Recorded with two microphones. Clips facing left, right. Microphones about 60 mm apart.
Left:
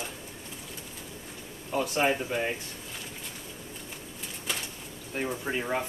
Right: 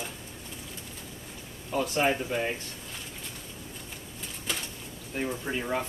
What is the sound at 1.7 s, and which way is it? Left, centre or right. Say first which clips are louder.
Speech: even; centre.